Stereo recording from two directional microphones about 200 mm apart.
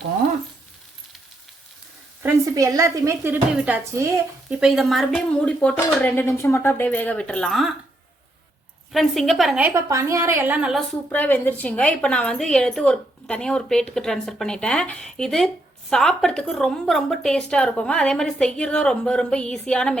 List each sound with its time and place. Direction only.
2.2 s a woman's voice: 15° right (ahead or behind); by 7.8 s centre (ahead or behind)
8.9 s a woman's voice: centre (ahead or behind)
11.1 s a woman's voice: 10° left (ahead or behind)